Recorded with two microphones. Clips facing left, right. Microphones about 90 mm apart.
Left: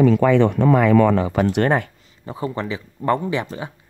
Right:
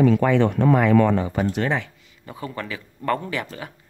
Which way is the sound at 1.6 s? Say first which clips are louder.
Left 5 dB; 50° left (ahead or behind).